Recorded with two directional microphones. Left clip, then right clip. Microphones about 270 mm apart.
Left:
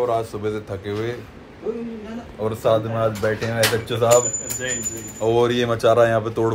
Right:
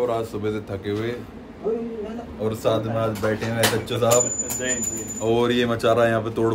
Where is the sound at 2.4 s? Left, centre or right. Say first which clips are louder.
Left 3 dB; centre.